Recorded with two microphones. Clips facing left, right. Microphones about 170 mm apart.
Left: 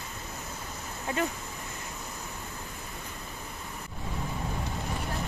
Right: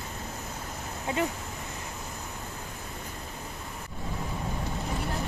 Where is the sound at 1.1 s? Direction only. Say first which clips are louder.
Right 1 dB; 20° right (ahead or behind).